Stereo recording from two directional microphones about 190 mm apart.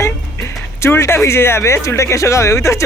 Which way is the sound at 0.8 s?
15° left (ahead or behind).